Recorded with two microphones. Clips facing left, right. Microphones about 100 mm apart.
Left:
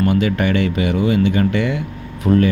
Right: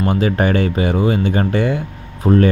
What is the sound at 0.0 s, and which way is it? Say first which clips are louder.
Speech: even; 35° right (ahead or behind).